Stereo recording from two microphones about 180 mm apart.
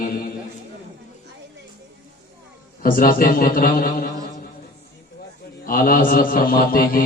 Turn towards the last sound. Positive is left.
turn(degrees=55)  # may be behind; listen again after turning